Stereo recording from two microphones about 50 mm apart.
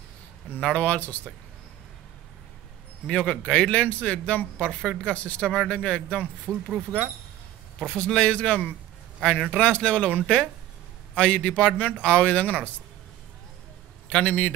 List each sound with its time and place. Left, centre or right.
0.7 s a man's voice: left
3.1 s a man's voice: left
4.6 s speech: centre
5.1 s a man's voice: left
7.8 s a man's voice: centre
9.4 s speech: centre
9.7 s a man's voice: left
10.2 s speech: centre
11.1 s a man's voice: left
14.0 s a man's voice: left